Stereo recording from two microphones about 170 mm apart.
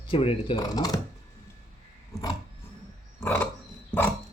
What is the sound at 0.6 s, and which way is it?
Speech, 20° left (ahead or behind).